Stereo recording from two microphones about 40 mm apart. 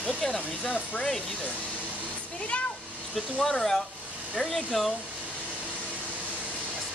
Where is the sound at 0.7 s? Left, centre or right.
Left.